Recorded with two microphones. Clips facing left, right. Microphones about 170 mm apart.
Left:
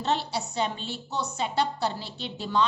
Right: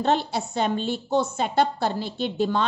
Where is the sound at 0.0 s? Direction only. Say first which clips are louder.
Right 5 dB; 50° right (ahead or behind).